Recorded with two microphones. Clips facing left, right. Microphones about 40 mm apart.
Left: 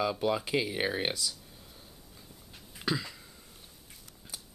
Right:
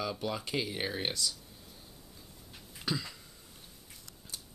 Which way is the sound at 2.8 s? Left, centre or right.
Centre.